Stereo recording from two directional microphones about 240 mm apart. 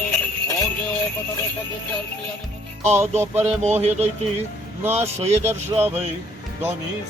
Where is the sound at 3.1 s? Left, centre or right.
Right.